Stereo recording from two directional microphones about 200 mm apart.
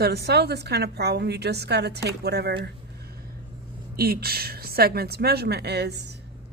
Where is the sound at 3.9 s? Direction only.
50° right (ahead or behind).